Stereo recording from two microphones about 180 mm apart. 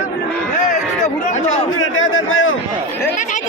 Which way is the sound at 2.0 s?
90° left.